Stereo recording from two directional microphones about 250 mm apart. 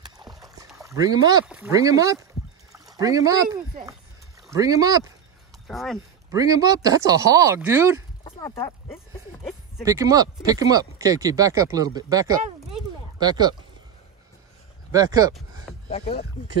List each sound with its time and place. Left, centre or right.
0.0 s a sound: centre
0.7 s speech: centre
2.7 s pour: centre
4.5 s speech: centre
5.7 s speech: centre
6.3 s speech: centre
8.2 s a sound: centre
9.8 s speech: centre
14.9 s speech: centre
15.7 s a sound: centre